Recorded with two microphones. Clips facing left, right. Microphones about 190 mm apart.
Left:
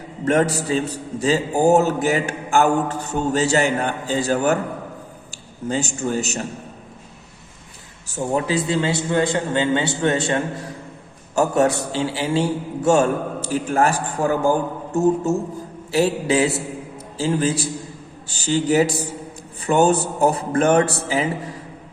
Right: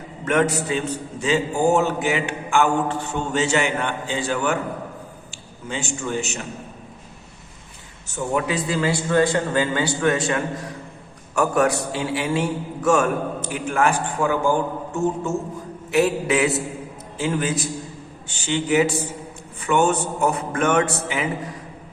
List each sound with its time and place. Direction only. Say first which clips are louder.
0.3 s a man's voice: left 2 dB; 35° left (ahead or behind)
5.6 s a man's voice: left 5 dB; 40° left (ahead or behind)
8.0 s a man's voice: left 1 dB; 30° left (ahead or behind)